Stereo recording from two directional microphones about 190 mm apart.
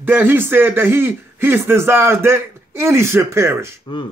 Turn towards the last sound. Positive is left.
turn(degrees=-15)  # may be behind; listen again after turning